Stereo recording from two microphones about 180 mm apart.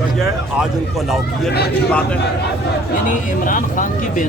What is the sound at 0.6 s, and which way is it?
Speech, centre (ahead or behind).